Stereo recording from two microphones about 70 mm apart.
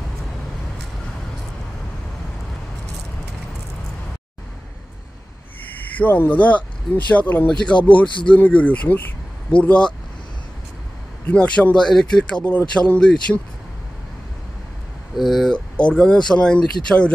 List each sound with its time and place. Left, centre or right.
5.7 s speech: left
11.2 s speech: centre
15.1 s speech: centre
15.5 s speech: centre